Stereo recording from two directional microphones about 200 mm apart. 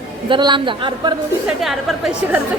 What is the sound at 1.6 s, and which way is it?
Speech, centre (ahead or behind).